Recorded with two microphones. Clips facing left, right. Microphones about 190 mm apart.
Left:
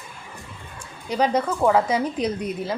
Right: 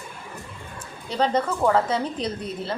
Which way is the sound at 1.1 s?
10° left (ahead or behind).